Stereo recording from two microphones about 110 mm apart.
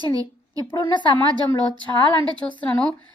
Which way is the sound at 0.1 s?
35° right (ahead or behind).